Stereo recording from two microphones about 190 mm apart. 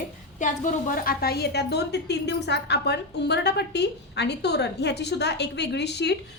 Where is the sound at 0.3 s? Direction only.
40° left (ahead or behind).